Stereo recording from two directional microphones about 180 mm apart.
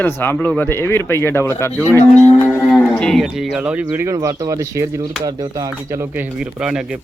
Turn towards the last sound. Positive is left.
turn(degrees=-5)  # may be behind; listen again after turning